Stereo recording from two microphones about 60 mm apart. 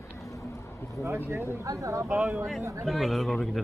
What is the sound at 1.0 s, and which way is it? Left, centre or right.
Speech, right.